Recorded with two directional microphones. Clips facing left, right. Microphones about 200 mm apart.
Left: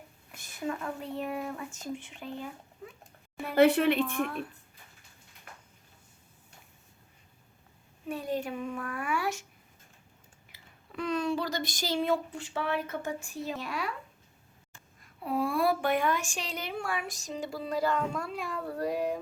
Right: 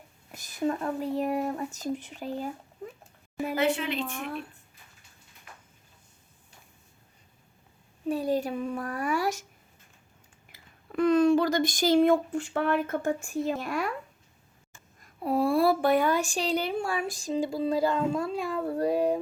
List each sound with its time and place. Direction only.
0.3 s speech: 40° right (ahead or behind)
3.5 s a woman's voice: 60° left (ahead or behind)
8.0 s speech: 35° right (ahead or behind)
10.5 s speech: 50° right (ahead or behind)
15.0 s speech: 40° right (ahead or behind)